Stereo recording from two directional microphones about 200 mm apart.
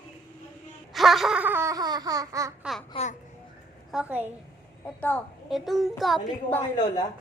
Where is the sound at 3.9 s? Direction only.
10° right (ahead or behind).